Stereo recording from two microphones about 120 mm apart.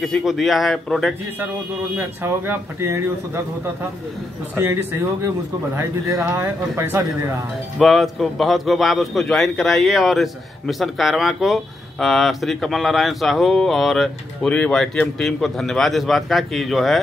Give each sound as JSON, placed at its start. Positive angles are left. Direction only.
{"t": 0.0, "sound": "a man's voice", "side_deg": 0}
{"t": 2.0, "sound": "speech", "side_deg": -20}
{"t": 5.8, "sound": "speech", "side_deg": -20}
{"t": 7.8, "sound": "a man's voice", "side_deg": 0}